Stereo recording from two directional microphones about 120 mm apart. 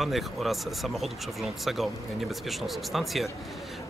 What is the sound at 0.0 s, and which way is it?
Speech, centre (ahead or behind).